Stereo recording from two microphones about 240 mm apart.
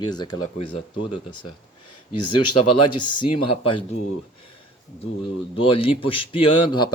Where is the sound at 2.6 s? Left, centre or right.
Left.